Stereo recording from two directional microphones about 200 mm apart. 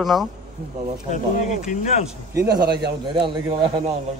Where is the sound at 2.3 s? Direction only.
15° right (ahead or behind).